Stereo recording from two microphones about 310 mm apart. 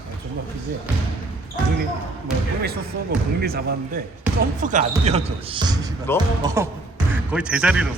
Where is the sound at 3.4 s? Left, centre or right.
Right.